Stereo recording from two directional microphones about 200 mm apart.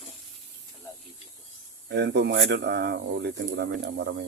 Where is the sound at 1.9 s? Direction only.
60° right (ahead or behind).